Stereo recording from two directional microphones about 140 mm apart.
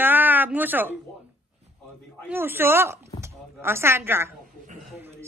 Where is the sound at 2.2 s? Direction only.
15° right (ahead or behind).